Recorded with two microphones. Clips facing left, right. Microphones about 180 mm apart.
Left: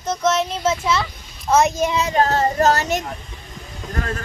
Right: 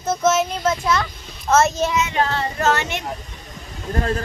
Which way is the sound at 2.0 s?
40° left (ahead or behind).